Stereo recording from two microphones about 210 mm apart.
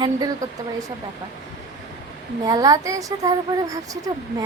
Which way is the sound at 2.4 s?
15° right (ahead or behind).